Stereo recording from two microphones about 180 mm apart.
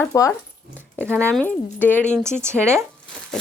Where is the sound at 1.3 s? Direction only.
5° left (ahead or behind).